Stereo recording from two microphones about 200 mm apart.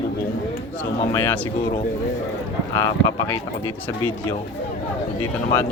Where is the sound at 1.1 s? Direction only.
15° left (ahead or behind).